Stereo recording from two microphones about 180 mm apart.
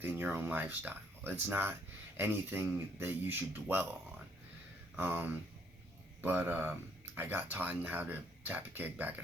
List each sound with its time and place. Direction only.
0.0 s speech: 10° right (ahead or behind)
4.9 s speech: 10° right (ahead or behind)